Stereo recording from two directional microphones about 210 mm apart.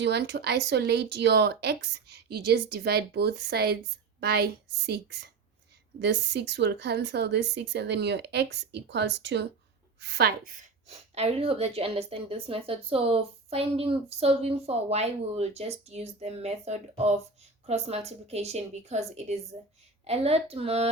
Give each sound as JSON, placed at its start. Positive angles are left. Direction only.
{"t": 0.0, "sound": "a woman's voice", "side_deg": -55}